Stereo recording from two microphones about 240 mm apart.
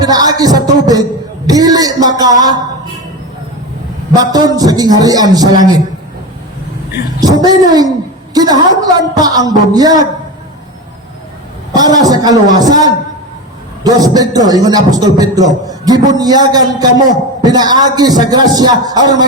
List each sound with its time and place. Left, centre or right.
0.0 s a woman's voice: centre
4.1 s a woman's voice: centre
7.2 s a woman's voice: centre
11.7 s a woman's voice: centre